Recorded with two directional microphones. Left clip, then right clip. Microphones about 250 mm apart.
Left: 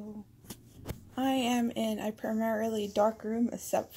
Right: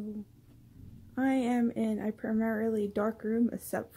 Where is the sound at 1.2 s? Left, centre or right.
Centre.